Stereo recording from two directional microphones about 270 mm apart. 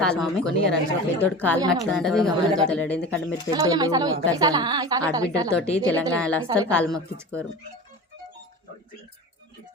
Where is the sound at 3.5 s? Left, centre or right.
Centre.